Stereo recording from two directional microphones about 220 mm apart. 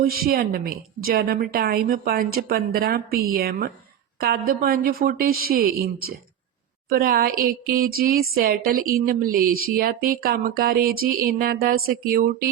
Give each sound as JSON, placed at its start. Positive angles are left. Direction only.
{"t": 0.0, "sound": "a woman's voice", "side_deg": -45}